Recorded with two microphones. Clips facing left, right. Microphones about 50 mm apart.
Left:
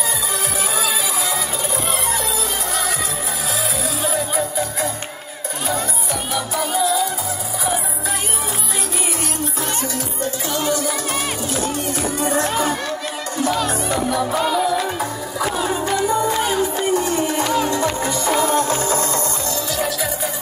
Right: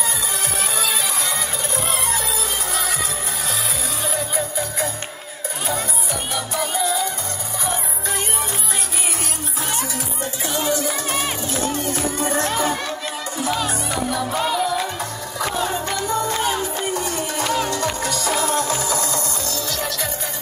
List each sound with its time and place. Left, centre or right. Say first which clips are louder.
1.9 s music: left 1 dB; centre
4.0 s music: left 3 dB; centre
6.3 s music: left 3 dB; centre
10.8 s music: left 1 dB; right
12.4 s music: left 1 dB; left
13.4 s music: left 3 dB; centre; by 19.0 s left
19.7 s music: left 5 dB; centre